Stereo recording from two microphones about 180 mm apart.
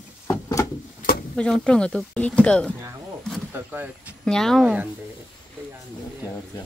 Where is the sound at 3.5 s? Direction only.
10° right (ahead or behind).